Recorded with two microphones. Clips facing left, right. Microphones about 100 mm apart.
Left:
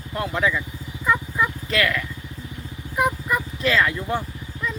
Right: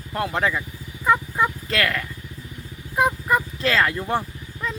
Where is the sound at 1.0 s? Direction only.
35° right (ahead or behind).